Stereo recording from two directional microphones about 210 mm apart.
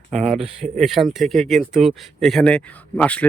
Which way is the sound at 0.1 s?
Centre (ahead or behind).